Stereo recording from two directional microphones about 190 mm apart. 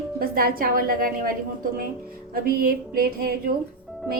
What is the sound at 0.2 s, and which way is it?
A woman's voice, 50° right (ahead or behind).